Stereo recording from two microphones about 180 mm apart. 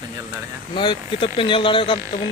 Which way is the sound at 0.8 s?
25° left (ahead or behind).